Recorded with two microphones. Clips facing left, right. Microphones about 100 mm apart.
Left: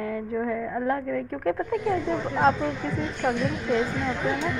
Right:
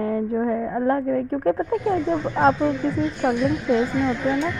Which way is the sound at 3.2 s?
15° right (ahead or behind).